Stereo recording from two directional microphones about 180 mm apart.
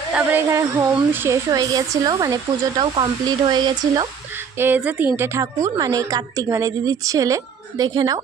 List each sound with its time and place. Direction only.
0.1 s a woman's voice: 10° right (ahead or behind)
4.6 s a woman's voice: 10° right (ahead or behind)